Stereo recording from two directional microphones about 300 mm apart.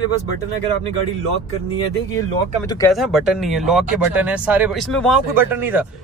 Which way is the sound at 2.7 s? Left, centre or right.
Centre.